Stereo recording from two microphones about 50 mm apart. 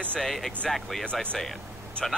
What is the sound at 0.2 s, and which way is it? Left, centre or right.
Speech, centre.